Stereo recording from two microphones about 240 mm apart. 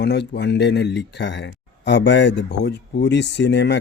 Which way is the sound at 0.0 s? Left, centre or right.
Left.